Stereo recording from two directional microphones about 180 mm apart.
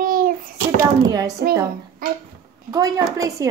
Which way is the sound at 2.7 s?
20° right (ahead or behind).